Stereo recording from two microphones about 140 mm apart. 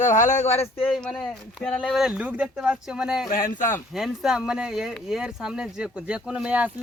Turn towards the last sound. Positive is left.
turn(degrees=-10)  # may be behind; listen again after turning